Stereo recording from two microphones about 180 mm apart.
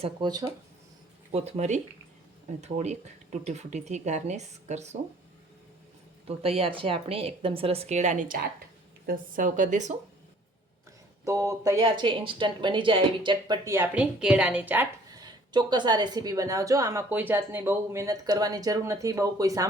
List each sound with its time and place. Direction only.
0.0 s a woman's voice: 25° right (ahead or behind)
1.3 s speech: 35° right (ahead or behind)
6.2 s speech: 30° right (ahead or behind)
11.3 s a woman's voice: 15° right (ahead or behind)
11.8 s a woman's voice: 30° right (ahead or behind)
13.7 s a woman's voice: 10° right (ahead or behind)
15.1 s a woman's voice: 25° right (ahead or behind)